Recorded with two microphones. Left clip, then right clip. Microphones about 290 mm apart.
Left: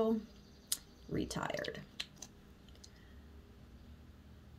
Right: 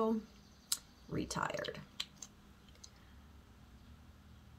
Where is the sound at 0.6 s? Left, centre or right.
Centre.